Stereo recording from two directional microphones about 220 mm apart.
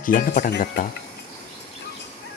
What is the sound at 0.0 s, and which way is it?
Speech, 40° left (ahead or behind).